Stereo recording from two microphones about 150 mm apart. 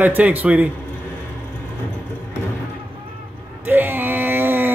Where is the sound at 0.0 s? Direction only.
10° right (ahead or behind).